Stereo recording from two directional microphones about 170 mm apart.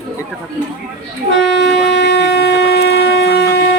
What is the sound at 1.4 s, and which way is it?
Shofar, 90° left.